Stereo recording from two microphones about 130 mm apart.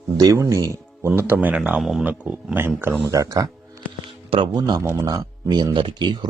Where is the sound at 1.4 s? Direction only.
10° right (ahead or behind).